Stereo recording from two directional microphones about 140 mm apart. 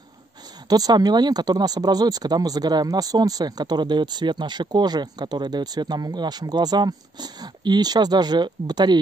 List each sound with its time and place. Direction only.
0.7 s speech: 30° right (ahead or behind)